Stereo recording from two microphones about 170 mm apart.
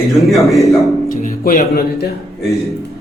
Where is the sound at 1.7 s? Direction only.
70° left (ahead or behind).